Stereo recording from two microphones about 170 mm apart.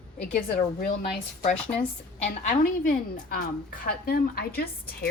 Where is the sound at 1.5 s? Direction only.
5° left (ahead or behind).